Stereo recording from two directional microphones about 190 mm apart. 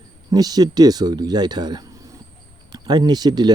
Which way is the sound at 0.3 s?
20° right (ahead or behind).